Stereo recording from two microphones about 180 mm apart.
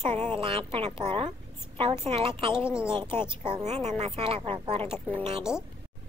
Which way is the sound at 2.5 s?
5° right (ahead or behind).